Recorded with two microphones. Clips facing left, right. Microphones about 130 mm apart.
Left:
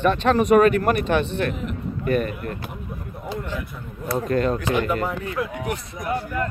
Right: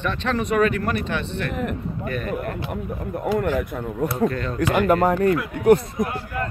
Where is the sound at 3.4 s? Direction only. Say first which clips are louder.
Right 8 dB; 55° right (ahead or behind).